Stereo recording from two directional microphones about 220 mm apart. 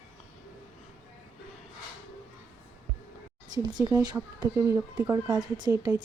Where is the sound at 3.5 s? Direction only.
20° right (ahead or behind).